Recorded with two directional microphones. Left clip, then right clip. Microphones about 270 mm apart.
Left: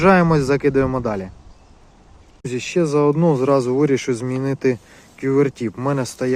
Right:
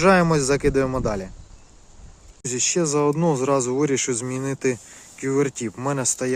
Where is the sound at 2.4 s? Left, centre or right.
Centre.